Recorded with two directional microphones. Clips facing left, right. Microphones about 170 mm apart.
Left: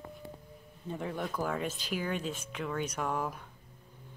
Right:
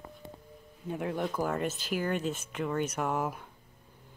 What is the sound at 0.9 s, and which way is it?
Speech, 10° right (ahead or behind).